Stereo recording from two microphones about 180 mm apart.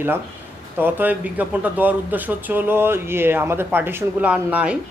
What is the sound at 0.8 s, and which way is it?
Speech, 10° right (ahead or behind).